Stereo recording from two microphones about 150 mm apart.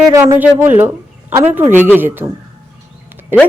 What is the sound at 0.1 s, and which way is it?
A woman's voice, 20° right (ahead or behind).